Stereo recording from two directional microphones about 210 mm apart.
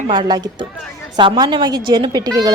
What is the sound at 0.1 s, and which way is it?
A woman's voice, 20° right (ahead or behind).